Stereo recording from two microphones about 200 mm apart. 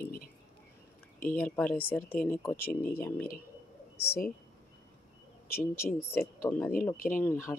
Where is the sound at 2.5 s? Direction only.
50° left (ahead or behind).